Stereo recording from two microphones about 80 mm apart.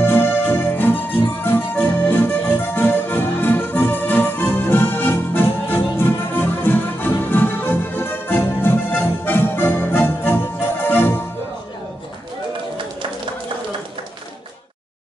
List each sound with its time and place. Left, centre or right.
0.0 s music: left